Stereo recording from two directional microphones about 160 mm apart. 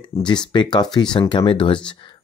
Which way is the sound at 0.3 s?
30° left (ahead or behind).